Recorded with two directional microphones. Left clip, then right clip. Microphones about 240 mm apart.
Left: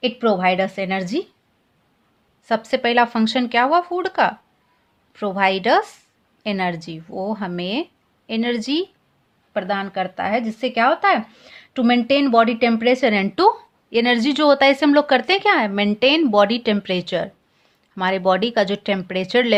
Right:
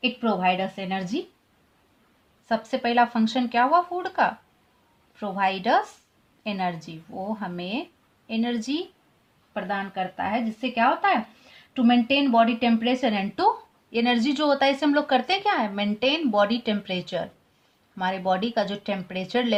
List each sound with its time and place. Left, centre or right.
0.0 s speech: left
2.5 s speech: left